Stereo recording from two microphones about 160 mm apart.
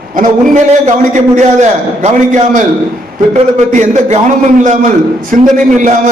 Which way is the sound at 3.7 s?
50° right (ahead or behind).